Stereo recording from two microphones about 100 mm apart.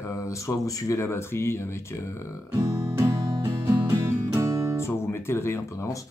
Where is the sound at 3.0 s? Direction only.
30° right (ahead or behind).